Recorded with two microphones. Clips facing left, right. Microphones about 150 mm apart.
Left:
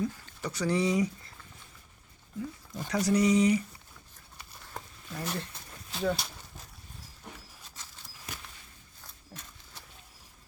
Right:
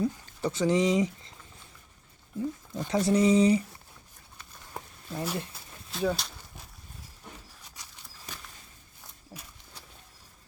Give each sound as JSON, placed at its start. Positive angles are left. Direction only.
{"t": 0.0, "sound": "speech", "side_deg": -25}
{"t": 2.4, "sound": "speech", "side_deg": -25}
{"t": 5.2, "sound": "speech", "side_deg": -10}
{"t": 9.3, "sound": "a sound", "side_deg": -15}